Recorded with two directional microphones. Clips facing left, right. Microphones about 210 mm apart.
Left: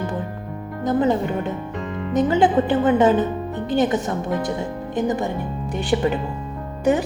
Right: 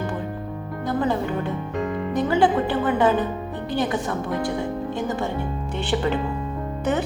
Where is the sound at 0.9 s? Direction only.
20° left (ahead or behind).